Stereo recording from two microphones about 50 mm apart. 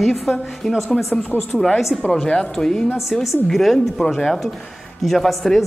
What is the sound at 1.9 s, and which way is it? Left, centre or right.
Speech, centre.